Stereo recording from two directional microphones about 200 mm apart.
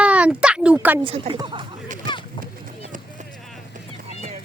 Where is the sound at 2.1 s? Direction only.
25° left (ahead or behind).